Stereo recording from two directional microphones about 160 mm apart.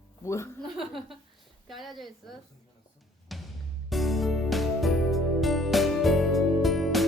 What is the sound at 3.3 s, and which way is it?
Music, centre (ahead or behind).